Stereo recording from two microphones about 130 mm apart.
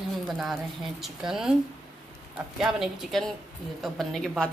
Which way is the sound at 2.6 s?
Centre (ahead or behind).